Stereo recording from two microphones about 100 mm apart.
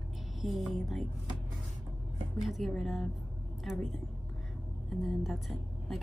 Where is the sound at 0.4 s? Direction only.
Centre (ahead or behind).